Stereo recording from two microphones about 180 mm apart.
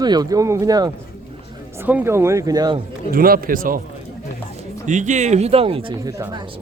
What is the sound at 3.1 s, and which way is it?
Speech, 55° right (ahead or behind).